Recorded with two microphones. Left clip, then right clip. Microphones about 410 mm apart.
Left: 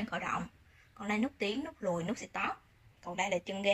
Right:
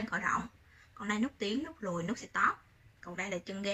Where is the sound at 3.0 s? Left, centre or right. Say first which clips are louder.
Left 5 dB; left.